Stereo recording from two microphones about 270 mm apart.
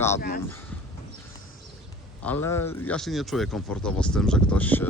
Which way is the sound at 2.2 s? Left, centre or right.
Centre.